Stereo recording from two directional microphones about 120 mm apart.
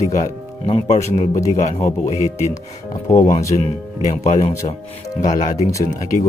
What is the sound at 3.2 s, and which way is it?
Speech, 70° left (ahead or behind).